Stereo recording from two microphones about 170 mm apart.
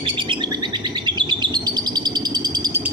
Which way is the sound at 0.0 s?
30° right (ahead or behind).